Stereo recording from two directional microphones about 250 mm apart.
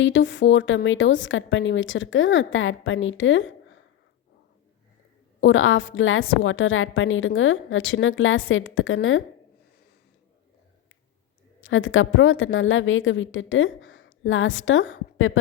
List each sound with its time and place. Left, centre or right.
0.0 s a woman's voice: left
5.4 s a woman's voice: left
11.6 s a woman's voice: left